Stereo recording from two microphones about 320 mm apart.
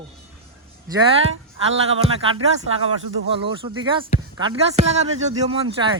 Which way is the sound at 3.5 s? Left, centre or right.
Centre.